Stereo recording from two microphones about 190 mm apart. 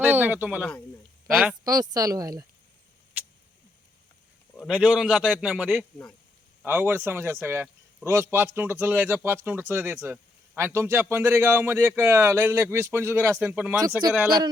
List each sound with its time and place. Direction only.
0.0 s speech: 10° right (ahead or behind)
1.6 s speech: 20° right (ahead or behind)
3.2 s a sound: 10° right (ahead or behind)
4.7 s a man's voice: 5° right (ahead or behind)